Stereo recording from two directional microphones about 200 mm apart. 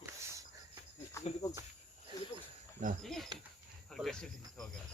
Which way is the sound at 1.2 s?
15° left (ahead or behind).